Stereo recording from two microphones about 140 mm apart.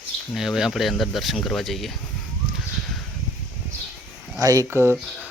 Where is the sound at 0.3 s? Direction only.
Centre (ahead or behind).